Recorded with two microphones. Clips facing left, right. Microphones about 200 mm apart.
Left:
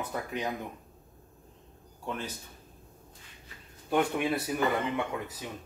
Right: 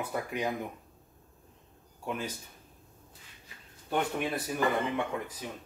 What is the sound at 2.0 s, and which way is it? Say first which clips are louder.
Speech: right 1 dB; 10° right (ahead or behind).